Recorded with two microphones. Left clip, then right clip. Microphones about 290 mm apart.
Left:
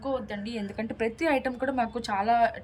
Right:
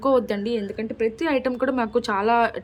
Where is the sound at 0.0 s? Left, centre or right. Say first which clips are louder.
Right 11 dB; centre.